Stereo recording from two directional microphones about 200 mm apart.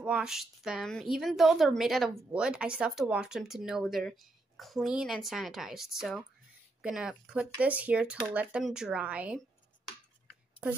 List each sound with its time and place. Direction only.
0.0 s speech: 5° right (ahead or behind)